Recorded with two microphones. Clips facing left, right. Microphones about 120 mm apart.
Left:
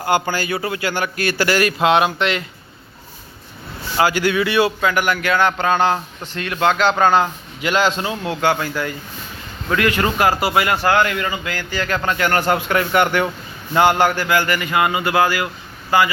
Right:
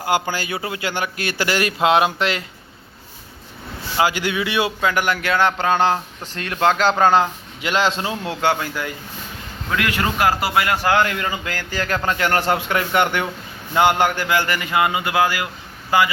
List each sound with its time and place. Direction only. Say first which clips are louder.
0.0 s a man's voice: left 2 dB; 10° right (ahead or behind); by 2.4 s 30° right (ahead or behind)
3.9 s a man's voice: left 3 dB; 15° right (ahead or behind)
8.1 s a man's voice: left 2 dB; 20° left (ahead or behind)
8.4 s a man's voice: left 2 dB; 20° right (ahead or behind)
9.7 s a man's voice: left 3 dB; 5° right (ahead or behind)
10.8 s a man's voice: left 1 dB; 25° right (ahead or behind); by 11.9 s 40° right (ahead or behind)
12.0 s a man's voice: left 1 dB; 30° right (ahead or behind)